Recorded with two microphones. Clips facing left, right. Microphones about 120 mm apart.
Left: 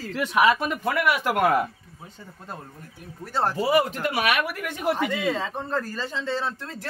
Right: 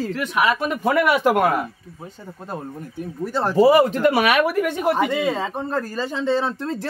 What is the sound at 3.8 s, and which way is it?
Speech, 90° right.